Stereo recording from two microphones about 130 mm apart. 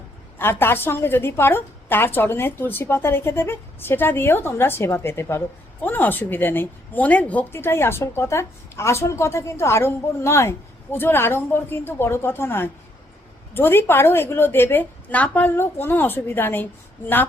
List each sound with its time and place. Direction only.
0.3 s a woman's voice: 15° left (ahead or behind)